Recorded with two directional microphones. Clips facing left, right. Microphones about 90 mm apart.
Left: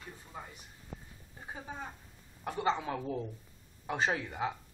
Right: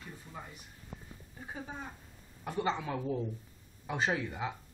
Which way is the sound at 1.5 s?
30° left (ahead or behind).